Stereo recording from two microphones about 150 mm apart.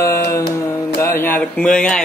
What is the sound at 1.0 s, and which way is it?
Speech, 15° left (ahead or behind).